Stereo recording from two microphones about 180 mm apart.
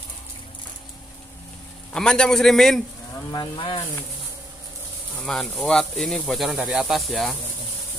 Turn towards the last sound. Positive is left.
turn(degrees=0)  # may be behind; listen again after turning